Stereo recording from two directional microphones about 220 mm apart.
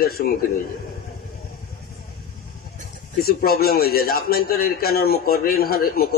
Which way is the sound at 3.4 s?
45° left (ahead or behind).